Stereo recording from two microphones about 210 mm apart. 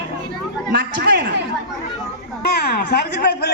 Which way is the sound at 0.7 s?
50° right (ahead or behind).